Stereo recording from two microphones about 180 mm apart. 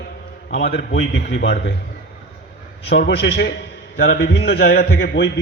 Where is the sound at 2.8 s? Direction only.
65° left (ahead or behind).